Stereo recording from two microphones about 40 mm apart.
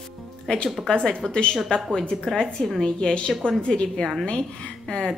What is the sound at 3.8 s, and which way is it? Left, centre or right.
Speech, centre.